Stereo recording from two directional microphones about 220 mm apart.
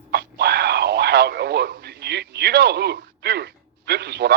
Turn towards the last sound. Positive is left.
turn(degrees=-50)  # may be behind; listen again after turning